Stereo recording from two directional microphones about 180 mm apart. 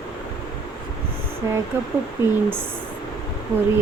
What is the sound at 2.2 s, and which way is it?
Speech, 15° right (ahead or behind).